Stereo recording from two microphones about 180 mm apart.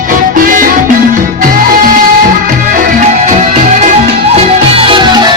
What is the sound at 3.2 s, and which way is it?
Music, 35° right (ahead or behind).